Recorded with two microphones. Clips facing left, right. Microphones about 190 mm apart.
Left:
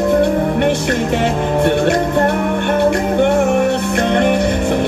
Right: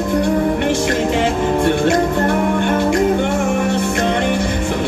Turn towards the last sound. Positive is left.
turn(degrees=60)  # may be behind; listen again after turning